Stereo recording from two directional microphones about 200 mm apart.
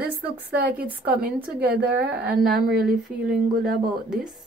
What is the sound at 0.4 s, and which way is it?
A woman's voice, 55° right (ahead or behind).